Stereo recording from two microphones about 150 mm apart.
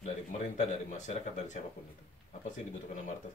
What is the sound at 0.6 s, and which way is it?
Speech, 50° left (ahead or behind).